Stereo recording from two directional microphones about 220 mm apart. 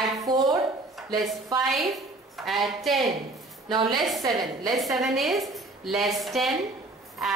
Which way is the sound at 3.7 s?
20° right (ahead or behind).